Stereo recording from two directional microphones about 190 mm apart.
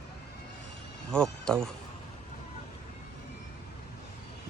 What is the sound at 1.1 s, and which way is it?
Speech, 5° left (ahead or behind).